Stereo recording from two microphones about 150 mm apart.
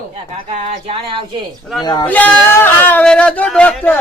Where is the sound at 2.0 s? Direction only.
10° left (ahead or behind).